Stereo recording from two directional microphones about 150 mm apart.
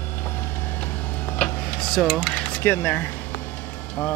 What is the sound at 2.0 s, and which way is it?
Speech, 5° left (ahead or behind).